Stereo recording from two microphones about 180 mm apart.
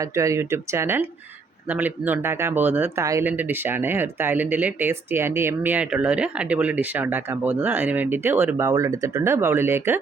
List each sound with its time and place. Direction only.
0.0 s speech: 15° right (ahead or behind)